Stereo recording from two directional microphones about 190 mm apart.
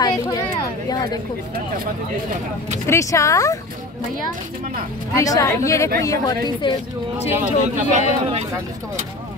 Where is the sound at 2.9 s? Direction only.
15° left (ahead or behind).